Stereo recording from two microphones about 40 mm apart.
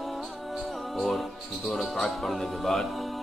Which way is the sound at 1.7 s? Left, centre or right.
Centre.